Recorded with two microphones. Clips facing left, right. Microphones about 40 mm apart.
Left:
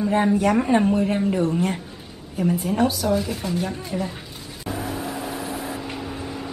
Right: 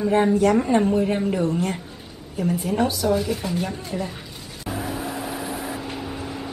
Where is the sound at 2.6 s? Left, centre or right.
Centre.